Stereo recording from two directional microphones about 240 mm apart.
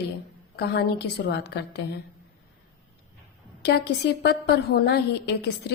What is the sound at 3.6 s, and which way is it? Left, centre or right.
A woman's voice, left.